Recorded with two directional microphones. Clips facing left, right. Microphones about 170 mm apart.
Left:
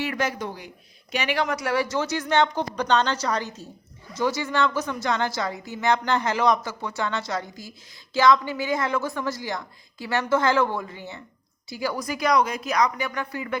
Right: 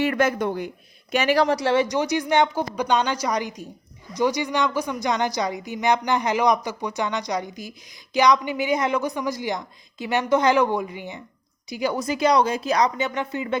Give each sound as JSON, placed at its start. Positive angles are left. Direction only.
{"t": 0.0, "sound": "speech", "side_deg": -55}
{"t": 1.1, "sound": "a man's voice", "side_deg": -45}